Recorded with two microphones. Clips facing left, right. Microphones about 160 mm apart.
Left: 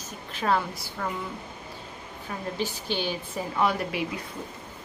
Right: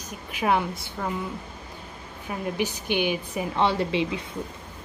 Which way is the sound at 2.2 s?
15° right (ahead or behind).